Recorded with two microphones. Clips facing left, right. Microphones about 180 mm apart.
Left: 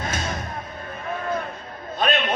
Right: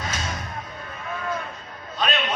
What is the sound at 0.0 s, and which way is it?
Music, 50° left (ahead or behind).